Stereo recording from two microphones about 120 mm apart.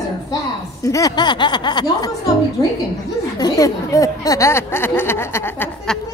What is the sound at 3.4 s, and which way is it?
Speech, 30° left (ahead or behind).